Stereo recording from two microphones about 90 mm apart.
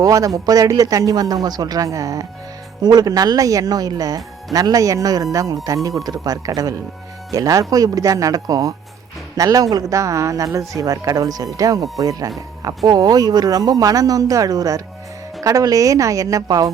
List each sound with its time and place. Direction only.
0.0 s speech: 40° right (ahead or behind)